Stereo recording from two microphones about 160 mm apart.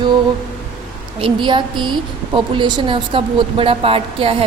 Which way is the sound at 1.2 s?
30° right (ahead or behind).